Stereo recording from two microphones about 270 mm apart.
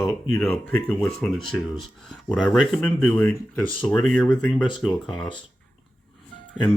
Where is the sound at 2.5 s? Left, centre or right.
Centre.